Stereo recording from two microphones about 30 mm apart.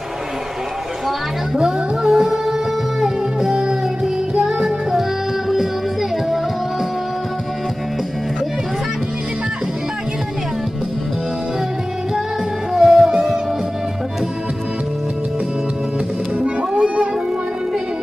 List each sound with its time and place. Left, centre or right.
1.0 s music: centre
3.5 s music: right
4.4 s music: centre
12.7 s music: centre
16.8 s music: right